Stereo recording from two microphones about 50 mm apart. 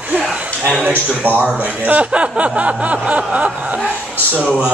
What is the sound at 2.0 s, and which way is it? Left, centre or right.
Speech, right.